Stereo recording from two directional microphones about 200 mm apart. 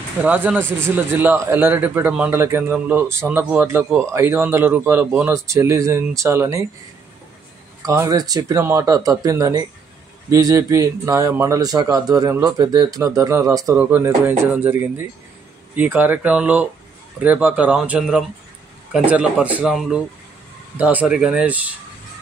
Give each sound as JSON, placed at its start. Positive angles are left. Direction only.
{"t": 0.2, "sound": "speech", "side_deg": -5}
{"t": 7.8, "sound": "speech", "side_deg": -15}